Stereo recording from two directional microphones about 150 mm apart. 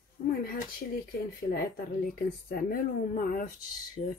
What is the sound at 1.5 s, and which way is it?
Speech, 75° left (ahead or behind).